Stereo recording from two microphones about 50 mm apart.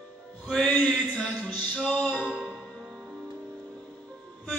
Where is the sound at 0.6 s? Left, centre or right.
Left.